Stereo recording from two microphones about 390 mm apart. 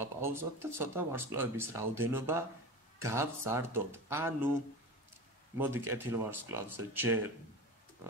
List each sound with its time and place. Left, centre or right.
0.0 s speech: centre
5.6 s speech: centre